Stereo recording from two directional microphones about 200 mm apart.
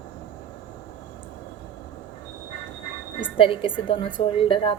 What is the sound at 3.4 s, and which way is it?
A woman's voice, 25° left (ahead or behind).